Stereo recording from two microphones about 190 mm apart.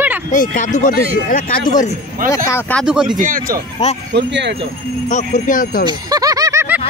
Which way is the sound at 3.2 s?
45° right (ahead or behind).